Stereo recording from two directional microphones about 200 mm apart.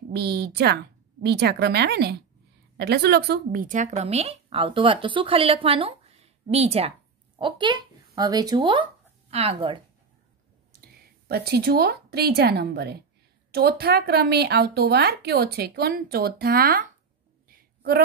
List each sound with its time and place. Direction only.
0.1 s speech: 55° right (ahead or behind); by 9.8 s 30° right (ahead or behind)
11.2 s a woman's voice: 50° right (ahead or behind)
17.5 s a sound: 50° right (ahead or behind)